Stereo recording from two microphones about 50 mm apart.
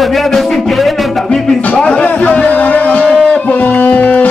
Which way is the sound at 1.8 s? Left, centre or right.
Centre.